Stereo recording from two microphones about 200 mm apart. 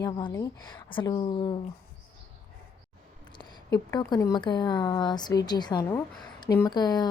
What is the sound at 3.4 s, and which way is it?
A woman's voice, 20° left (ahead or behind).